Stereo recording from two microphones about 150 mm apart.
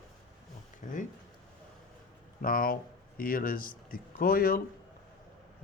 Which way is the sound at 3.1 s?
70° left (ahead or behind).